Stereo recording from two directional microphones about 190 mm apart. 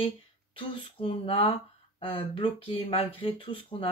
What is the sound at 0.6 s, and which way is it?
Speech, 30° left (ahead or behind).